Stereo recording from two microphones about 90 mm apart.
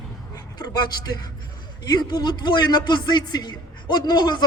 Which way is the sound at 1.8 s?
50° left (ahead or behind).